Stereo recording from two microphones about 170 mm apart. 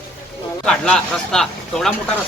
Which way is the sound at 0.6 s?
5° left (ahead or behind).